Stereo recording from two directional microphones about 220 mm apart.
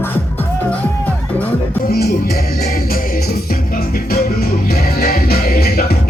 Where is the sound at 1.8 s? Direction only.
45° left (ahead or behind).